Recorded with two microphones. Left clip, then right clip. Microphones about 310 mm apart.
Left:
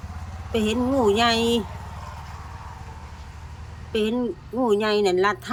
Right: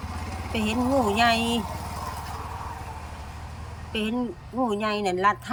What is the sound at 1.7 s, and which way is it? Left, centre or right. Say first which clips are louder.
Vehicle: right 5 dB; right.